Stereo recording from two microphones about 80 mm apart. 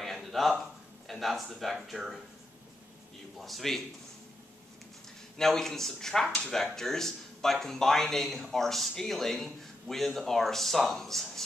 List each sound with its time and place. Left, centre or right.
0.0 s a sound: centre
1.0 s speech: centre
3.3 s speech: centre
5.4 s speech: centre